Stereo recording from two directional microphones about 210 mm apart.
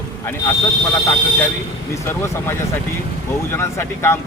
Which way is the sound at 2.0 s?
10° left (ahead or behind).